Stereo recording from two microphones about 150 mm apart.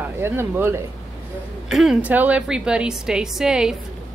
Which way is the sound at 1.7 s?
Centre (ahead or behind).